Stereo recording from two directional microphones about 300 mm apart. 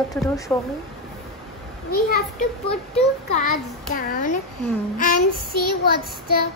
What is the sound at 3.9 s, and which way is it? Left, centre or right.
Child singing, left.